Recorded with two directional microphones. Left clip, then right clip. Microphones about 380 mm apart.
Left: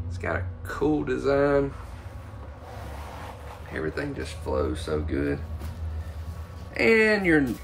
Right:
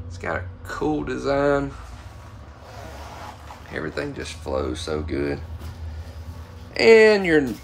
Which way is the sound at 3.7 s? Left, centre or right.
Centre.